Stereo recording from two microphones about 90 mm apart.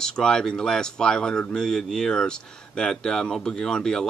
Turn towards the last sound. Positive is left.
turn(degrees=10)  # may be behind; listen again after turning